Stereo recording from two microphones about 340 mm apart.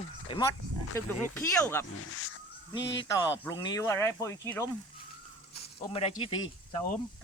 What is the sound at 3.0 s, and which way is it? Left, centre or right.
Speech, centre.